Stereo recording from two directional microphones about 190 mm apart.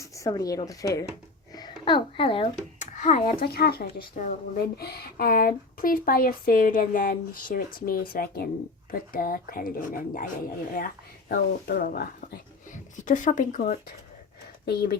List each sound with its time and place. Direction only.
0.0 s speech: 15° left (ahead or behind); by 13.9 s 40° left (ahead or behind)